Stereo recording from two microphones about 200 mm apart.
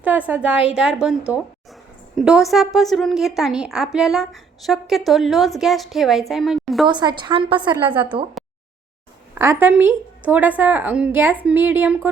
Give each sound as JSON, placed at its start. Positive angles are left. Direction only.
{"t": 0.0, "sound": "a woman's voice", "side_deg": -10}
{"t": 6.8, "sound": "a woman's voice", "side_deg": -20}
{"t": 7.7, "sound": "a woman's voice", "side_deg": -10}
{"t": 8.4, "sound": "a sound", "side_deg": 0}
{"t": 9.3, "sound": "a woman's voice", "side_deg": -10}